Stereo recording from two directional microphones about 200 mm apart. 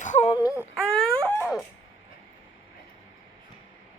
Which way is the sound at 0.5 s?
5° right (ahead or behind).